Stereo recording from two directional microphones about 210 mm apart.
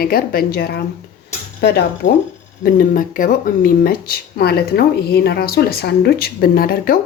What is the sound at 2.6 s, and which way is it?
Speech, 40° left (ahead or behind).